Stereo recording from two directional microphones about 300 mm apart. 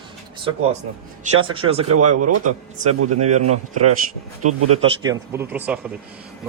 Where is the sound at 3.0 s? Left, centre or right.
Right.